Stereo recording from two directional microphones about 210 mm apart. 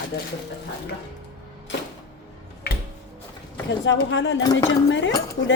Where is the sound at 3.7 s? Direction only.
60° left (ahead or behind).